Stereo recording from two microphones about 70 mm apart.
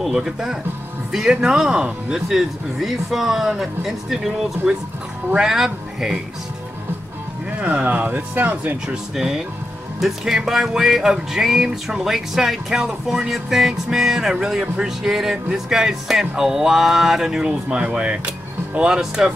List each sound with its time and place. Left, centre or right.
0.0 s music: centre
1.1 s speech: centre
5.3 s music: centre
7.5 s speech: right
8.8 s music: centre